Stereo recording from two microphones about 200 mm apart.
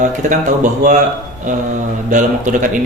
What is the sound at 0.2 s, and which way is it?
Speech, 40° right (ahead or behind).